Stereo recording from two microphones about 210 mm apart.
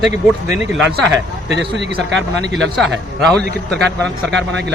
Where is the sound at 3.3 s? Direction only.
5° left (ahead or behind).